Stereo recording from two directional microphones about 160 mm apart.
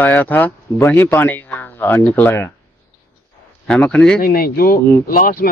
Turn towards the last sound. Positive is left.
turn(degrees=65)  # may be behind; listen again after turning